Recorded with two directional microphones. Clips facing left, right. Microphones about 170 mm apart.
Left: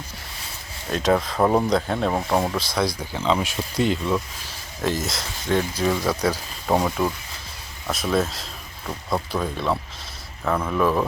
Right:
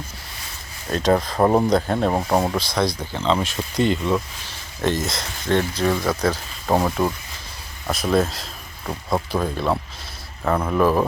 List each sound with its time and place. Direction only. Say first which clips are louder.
0.9 s speech: right 2 dB; centre (ahead or behind)
1.4 s speech: right 3 dB; 15° right (ahead or behind)
1.7 s speech: right 3 dB; 5° right (ahead or behind)
2.0 s speech: right 2 dB; 15° right (ahead or behind)
2.6 s speech: right 2 dB; 5° left (ahead or behind)
6.7 s speech: right 1 dB; 5° right (ahead or behind)
8.9 s speech: right 2 dB; 20° right (ahead or behind)
9.3 s speech: right 2 dB; centre (ahead or behind)
10.6 s speech: right 3 dB; 25° right (ahead or behind)